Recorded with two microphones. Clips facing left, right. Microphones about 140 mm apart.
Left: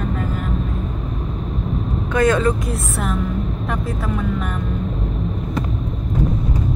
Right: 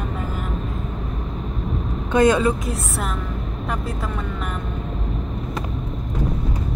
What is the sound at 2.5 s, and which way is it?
Speech, centre (ahead or behind).